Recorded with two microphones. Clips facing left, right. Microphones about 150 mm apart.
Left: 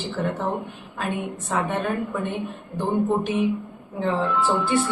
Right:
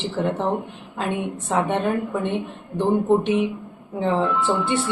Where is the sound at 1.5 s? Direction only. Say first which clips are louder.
Right 4 dB; 25° right (ahead or behind).